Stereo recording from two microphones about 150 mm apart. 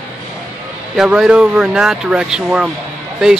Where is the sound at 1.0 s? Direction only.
5° right (ahead or behind).